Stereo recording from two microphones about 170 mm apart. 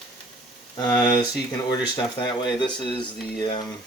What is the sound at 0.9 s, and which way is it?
Speech, 10° left (ahead or behind).